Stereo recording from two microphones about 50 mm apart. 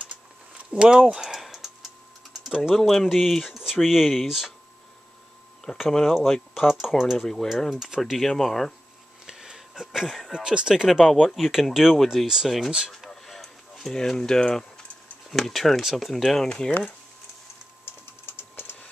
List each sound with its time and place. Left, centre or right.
0.7 s speech: centre
1.1 s typing: centre
2.7 s speech: centre
5.9 s speech: centre
8.0 s speech: centre
9.2 s a sound: centre
10.0 s speech: centre
10.3 s speech: centre
10.9 s speech: centre
13.2 s a sound: centre
15.2 s speech: centre
17.8 s typing: left